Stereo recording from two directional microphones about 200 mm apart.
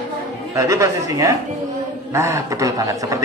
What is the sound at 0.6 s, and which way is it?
A man's voice, 15° right (ahead or behind).